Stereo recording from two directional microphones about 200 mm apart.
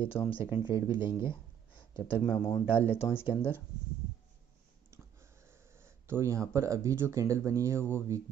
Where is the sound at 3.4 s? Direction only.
10° left (ahead or behind).